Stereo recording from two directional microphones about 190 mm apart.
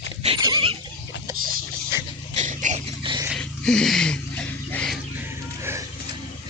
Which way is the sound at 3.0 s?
25° right (ahead or behind).